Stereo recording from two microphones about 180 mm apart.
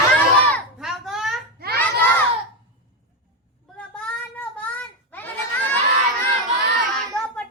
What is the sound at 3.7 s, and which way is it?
Child singing, 5° left (ahead or behind).